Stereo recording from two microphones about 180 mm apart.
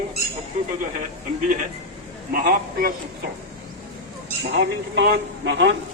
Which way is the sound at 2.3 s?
55° right (ahead or behind).